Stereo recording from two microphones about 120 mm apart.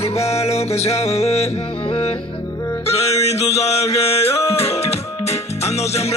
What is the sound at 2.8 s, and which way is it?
Music, 55° left (ahead or behind).